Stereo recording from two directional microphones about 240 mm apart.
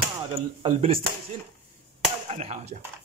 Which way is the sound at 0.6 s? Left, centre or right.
Right.